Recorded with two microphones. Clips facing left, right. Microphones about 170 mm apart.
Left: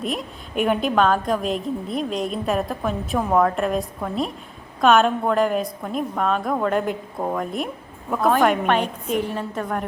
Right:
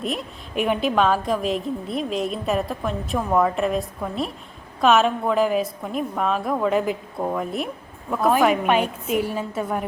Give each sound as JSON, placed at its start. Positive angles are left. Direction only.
{"t": 0.0, "sound": "a woman's voice", "side_deg": 0}